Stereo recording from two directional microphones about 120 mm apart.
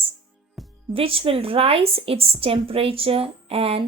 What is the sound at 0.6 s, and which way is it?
Music, centre (ahead or behind).